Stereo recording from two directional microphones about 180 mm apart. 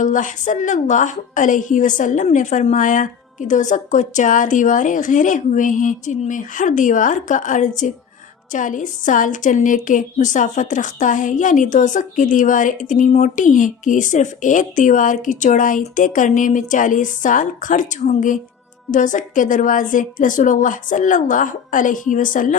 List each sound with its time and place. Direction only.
0.0 s a woman's voice: 45° left (ahead or behind)